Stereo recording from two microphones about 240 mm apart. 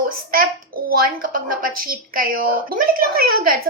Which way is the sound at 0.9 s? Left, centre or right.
Right.